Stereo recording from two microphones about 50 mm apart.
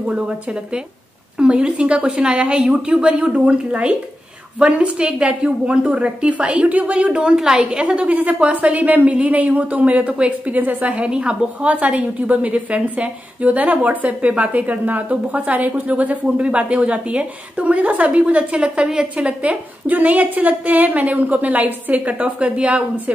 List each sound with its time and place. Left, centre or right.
0.0 s a woman's voice: right
7.6 s a woman's voice: right